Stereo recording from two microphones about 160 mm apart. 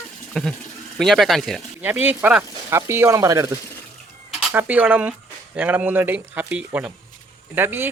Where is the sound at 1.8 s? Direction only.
10° right (ahead or behind).